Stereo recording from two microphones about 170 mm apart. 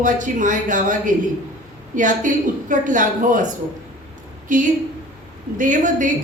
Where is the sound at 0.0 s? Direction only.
50° right (ahead or behind).